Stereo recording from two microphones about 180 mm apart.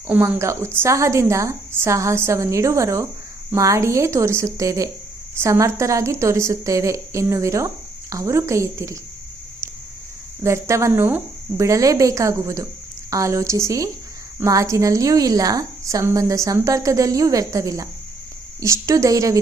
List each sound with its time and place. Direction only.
0.1 s a woman's voice: 10° right (ahead or behind)
10.4 s a woman's voice: 15° right (ahead or behind)